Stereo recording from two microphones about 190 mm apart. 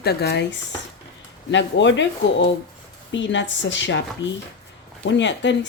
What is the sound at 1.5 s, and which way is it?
A woman's voice, 70° left (ahead or behind).